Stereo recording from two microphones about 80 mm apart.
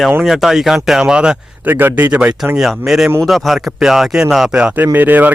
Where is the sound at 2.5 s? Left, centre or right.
Centre; by 5.3 s right.